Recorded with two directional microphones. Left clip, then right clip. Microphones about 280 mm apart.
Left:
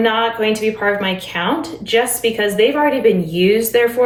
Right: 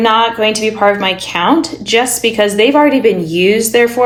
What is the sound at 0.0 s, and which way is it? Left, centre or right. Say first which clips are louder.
A woman's voice: right 5 dB; centre.